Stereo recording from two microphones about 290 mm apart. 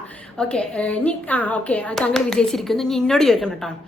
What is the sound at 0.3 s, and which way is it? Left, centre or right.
A woman's voice, centre.